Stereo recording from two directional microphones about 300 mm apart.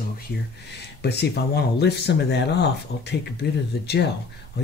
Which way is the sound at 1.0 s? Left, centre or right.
Left.